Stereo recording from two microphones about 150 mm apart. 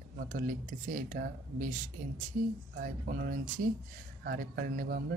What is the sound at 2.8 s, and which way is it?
Speech, 80° right.